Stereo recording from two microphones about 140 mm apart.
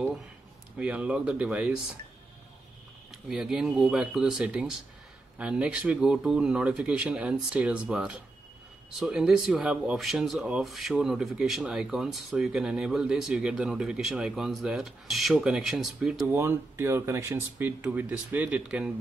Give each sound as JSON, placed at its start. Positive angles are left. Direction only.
{"t": 0.7, "sound": "speech", "side_deg": -10}
{"t": 3.3, "sound": "speech", "side_deg": -5}
{"t": 16.3, "sound": "speech", "side_deg": -15}